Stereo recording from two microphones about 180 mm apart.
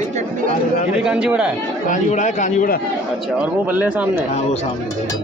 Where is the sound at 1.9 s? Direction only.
45° left (ahead or behind).